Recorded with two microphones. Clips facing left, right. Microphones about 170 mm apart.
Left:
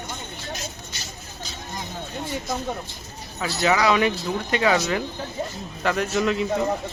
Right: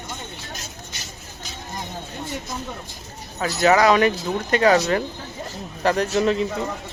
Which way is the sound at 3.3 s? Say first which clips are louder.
Right 4 dB; 50° right (ahead or behind).